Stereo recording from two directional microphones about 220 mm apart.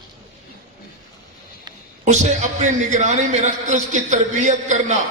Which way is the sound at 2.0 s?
30° right (ahead or behind).